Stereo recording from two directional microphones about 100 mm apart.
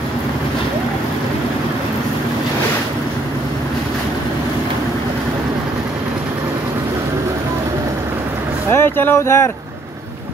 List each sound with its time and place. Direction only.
8.7 s speech: 20° left (ahead or behind)